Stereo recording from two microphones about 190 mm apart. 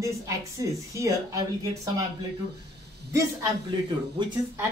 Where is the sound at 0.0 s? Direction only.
15° right (ahead or behind).